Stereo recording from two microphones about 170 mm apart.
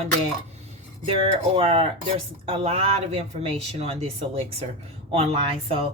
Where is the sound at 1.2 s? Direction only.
35° right (ahead or behind).